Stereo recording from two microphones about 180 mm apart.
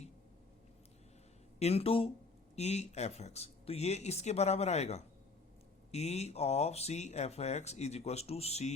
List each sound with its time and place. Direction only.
1.5 s speech: 35° left (ahead or behind)